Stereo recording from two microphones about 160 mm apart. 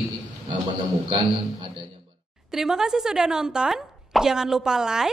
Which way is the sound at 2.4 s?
5° right (ahead or behind).